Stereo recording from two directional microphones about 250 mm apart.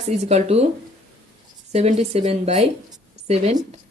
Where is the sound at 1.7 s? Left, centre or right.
Right.